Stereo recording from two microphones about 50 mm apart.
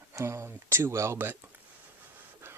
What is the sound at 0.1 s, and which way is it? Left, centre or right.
Speech, right.